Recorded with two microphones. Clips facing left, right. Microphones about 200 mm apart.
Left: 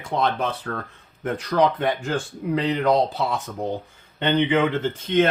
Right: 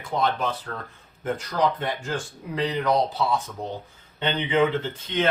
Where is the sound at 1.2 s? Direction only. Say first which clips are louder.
Left 4 dB; 60° left (ahead or behind).